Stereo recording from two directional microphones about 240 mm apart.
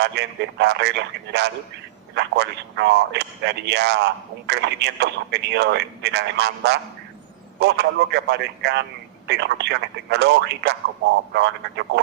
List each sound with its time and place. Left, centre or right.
0.0 s speech: right